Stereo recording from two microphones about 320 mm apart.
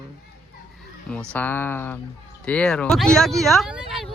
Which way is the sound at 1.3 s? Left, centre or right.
Centre.